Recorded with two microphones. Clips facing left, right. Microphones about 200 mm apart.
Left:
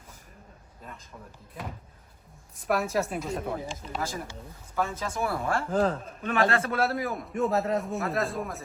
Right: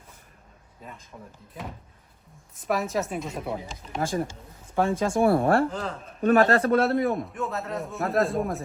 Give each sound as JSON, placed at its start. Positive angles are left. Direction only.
{"t": 1.6, "sound": "a man's voice", "side_deg": 0}
{"t": 3.7, "sound": "speech", "side_deg": -50}
{"t": 4.7, "sound": "speech", "side_deg": -30}
{"t": 5.4, "sound": "speech", "side_deg": -60}
{"t": 5.7, "sound": "a man's voice", "side_deg": 45}
{"t": 6.2, "sound": "a man's voice", "side_deg": -40}
{"t": 6.8, "sound": "a man's voice", "side_deg": 0}